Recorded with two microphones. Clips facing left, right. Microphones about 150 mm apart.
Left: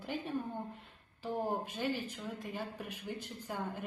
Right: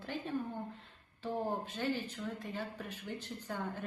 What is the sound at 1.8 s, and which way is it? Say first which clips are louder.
A woman's voice: even; 10° left (ahead or behind).